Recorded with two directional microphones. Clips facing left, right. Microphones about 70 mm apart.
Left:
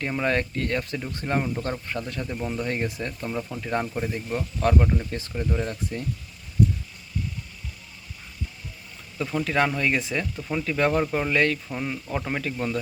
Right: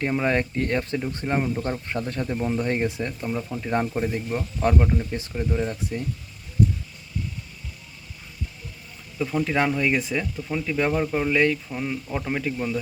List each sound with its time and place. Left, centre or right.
0.3 s speech: centre
1.2 s speech: centre
1.9 s speech: right
2.2 s speech: centre
3.1 s speech: centre
9.1 s speech: centre